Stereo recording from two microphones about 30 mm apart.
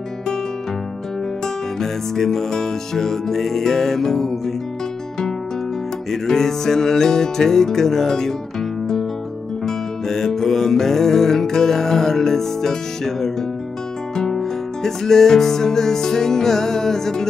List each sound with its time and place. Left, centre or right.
1.4 s music: centre
6.2 s music: centre
14.3 s music: centre